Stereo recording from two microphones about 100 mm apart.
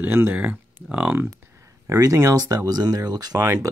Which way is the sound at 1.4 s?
25° right (ahead or behind).